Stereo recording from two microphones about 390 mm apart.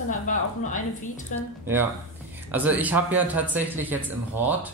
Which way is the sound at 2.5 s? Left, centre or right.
Centre.